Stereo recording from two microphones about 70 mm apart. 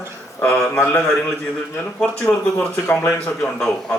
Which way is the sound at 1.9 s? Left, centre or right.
Left.